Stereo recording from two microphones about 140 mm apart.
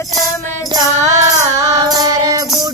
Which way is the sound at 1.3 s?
25° right (ahead or behind).